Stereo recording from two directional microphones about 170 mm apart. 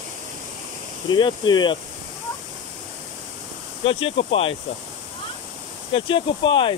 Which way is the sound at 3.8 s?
35° left (ahead or behind).